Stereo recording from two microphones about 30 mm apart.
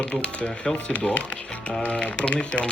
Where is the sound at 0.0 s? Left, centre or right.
Left.